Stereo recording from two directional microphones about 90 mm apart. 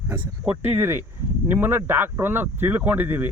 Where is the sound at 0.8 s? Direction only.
25° right (ahead or behind).